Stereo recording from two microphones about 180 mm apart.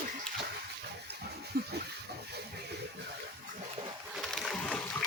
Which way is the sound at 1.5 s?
60° right (ahead or behind).